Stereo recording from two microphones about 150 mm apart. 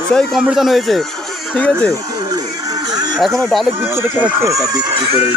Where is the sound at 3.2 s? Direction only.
Centre (ahead or behind).